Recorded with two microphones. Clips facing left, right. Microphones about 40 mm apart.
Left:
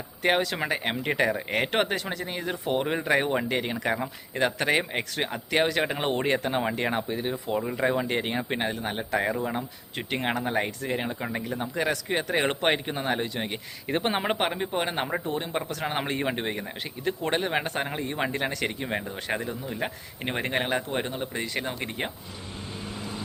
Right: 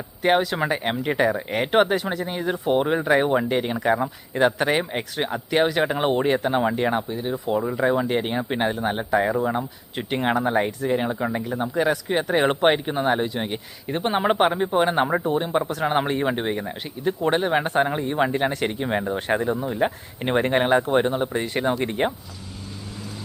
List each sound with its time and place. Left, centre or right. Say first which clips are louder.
0.2 s speech: right 5 dB; centre
4.4 s speech: right 4 dB; centre
8.5 s speech: right 6 dB; centre
9.1 s speech: right 5 dB; centre
13.9 s speech: right 5 dB; centre
19.4 s speech: right 9 dB; right
19.7 s speech: right 8 dB; centre
21.1 s speech: right 7 dB; right